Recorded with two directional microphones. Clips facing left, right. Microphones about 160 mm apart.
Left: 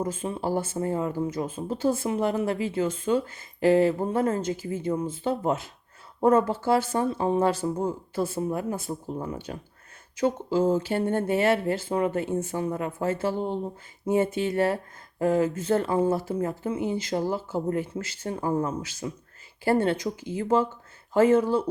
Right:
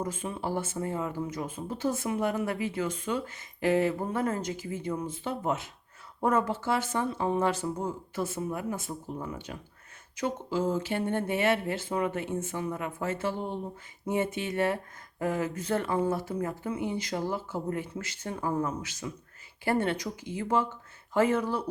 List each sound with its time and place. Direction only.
0.0 s speech: 30° left (ahead or behind)